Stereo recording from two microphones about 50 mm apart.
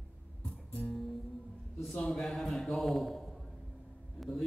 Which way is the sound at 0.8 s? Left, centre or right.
Centre.